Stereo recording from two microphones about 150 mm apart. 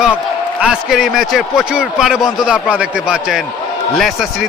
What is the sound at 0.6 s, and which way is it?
A man's voice, 5° right (ahead or behind).